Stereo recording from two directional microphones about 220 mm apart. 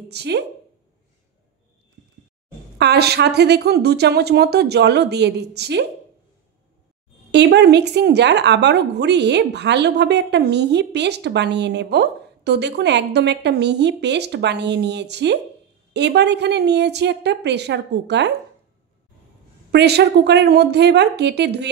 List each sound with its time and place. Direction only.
0.1 s a woman's voice: 50° right (ahead or behind)
2.8 s a woman's voice: 50° right (ahead or behind)
7.2 s a woman's voice: 50° right (ahead or behind)
19.7 s a woman's voice: 50° right (ahead or behind)